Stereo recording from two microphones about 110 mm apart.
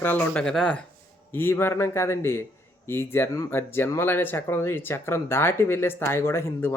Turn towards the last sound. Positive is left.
turn(degrees=25)  # may be behind; listen again after turning